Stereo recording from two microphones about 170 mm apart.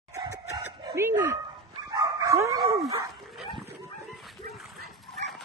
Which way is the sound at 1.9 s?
25° right (ahead or behind).